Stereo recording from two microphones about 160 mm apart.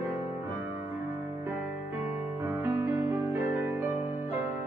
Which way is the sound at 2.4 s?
15° right (ahead or behind).